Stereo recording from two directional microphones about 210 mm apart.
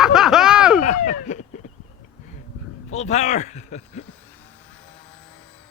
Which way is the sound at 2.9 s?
30° left (ahead or behind).